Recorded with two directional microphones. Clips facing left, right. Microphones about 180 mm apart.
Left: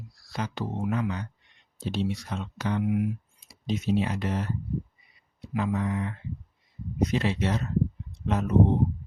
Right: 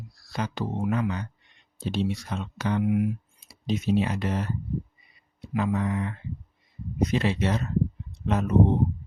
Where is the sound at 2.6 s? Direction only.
65° right (ahead or behind).